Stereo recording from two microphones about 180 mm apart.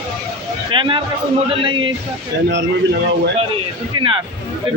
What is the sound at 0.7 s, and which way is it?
Speech, 25° right (ahead or behind).